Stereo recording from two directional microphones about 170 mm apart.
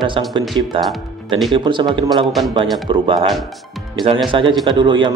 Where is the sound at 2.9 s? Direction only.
30° right (ahead or behind).